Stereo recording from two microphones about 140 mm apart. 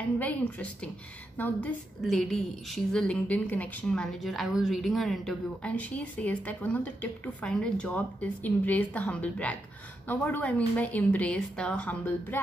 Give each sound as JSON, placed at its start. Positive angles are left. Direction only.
{"t": 0.2, "sound": "a woman's voice", "side_deg": 10}
{"t": 2.7, "sound": "a woman's voice", "side_deg": 5}